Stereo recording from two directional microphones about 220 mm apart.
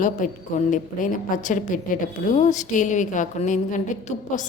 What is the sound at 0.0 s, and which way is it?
A woman's voice, 35° left (ahead or behind).